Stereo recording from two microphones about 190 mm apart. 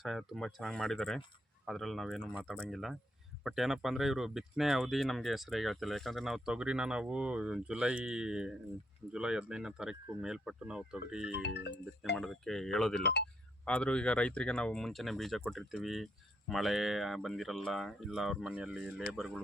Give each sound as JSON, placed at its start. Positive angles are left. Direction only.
{"t": 0.0, "sound": "speech", "side_deg": 0}
{"t": 11.4, "sound": "speech", "side_deg": 65}
{"t": 12.1, "sound": "speech", "side_deg": 0}